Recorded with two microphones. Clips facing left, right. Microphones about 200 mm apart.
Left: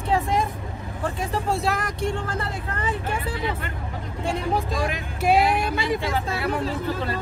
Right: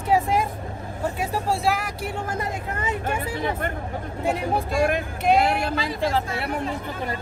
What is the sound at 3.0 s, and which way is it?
Speech, 50° right (ahead or behind).